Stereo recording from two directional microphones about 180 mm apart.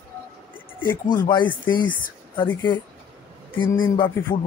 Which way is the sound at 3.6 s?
25° left (ahead or behind).